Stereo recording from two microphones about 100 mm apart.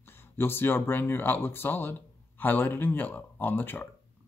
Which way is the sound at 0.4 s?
20° left (ahead or behind).